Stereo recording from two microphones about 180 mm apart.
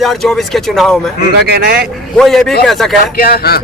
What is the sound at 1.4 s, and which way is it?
Speech, 65° right (ahead or behind).